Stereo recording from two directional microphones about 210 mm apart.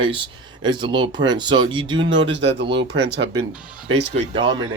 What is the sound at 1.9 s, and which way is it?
Speech, 60° right (ahead or behind).